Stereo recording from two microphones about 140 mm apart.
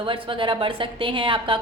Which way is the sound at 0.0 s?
40° right (ahead or behind).